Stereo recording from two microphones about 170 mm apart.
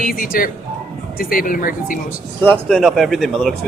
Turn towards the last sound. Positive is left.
turn(degrees=0)  # may be behind; listen again after turning